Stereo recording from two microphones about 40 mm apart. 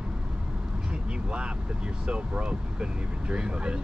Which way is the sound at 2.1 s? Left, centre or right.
Right.